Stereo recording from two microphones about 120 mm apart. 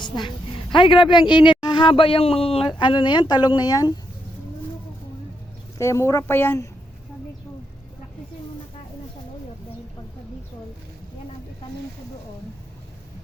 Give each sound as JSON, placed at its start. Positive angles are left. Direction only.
{"t": 0.0, "sound": "a woman's voice", "side_deg": 40}
{"t": 5.7, "sound": "a woman's voice", "side_deg": 25}